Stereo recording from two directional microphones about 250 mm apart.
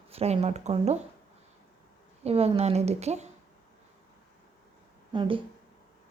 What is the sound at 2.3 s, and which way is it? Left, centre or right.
Speech, right.